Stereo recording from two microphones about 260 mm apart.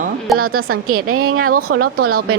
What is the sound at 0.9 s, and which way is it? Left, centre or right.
Speech, right.